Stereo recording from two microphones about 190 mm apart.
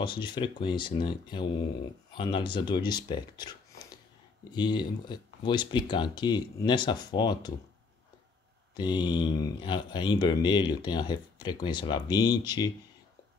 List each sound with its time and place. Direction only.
0.0 s speech: 25° left (ahead or behind)
8.7 s speech: 20° left (ahead or behind)